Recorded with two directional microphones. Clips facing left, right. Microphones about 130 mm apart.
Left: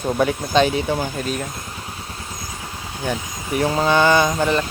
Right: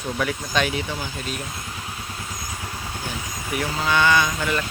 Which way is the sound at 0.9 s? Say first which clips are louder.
Left 8 dB; 45° left (ahead or behind).